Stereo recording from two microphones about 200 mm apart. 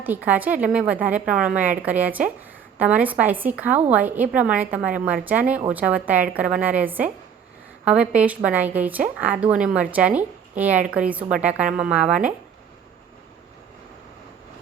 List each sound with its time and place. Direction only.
0.0 s a woman's voice: 10° right (ahead or behind)